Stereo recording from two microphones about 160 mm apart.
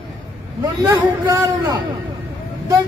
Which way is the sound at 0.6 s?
25° right (ahead or behind).